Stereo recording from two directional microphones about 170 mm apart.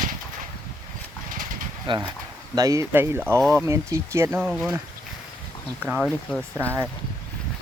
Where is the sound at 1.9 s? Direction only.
25° right (ahead or behind); by 4.8 s 10° right (ahead or behind).